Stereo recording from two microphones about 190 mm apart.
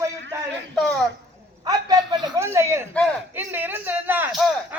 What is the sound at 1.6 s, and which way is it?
A man's voice, 20° right (ahead or behind).